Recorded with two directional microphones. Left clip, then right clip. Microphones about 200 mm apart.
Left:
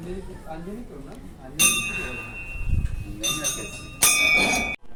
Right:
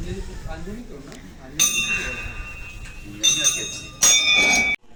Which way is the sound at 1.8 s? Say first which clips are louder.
Right 5 dB; 10° left (ahead or behind).